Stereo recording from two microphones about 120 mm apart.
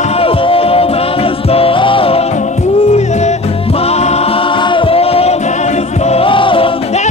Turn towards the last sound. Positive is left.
turn(degrees=45)  # may be behind; listen again after turning